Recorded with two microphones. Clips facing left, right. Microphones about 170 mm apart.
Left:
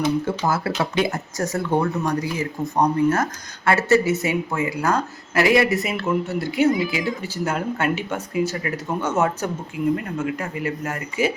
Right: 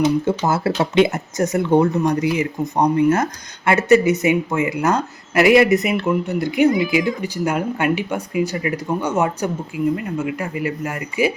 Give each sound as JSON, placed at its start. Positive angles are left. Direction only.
{"t": 0.0, "sound": "speech", "side_deg": -25}